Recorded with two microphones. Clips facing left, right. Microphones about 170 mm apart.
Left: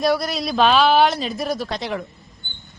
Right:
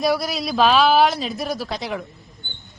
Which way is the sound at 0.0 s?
Centre (ahead or behind).